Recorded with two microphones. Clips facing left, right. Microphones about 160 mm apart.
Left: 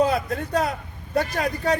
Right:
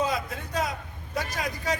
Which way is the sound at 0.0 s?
60° left (ahead or behind).